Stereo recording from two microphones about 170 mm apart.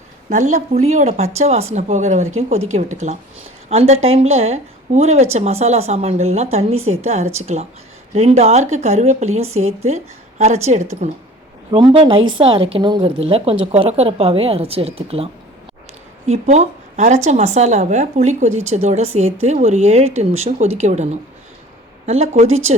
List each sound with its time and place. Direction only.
0.3 s a woman's voice: 45° right (ahead or behind)
11.7 s a woman's voice: 30° right (ahead or behind)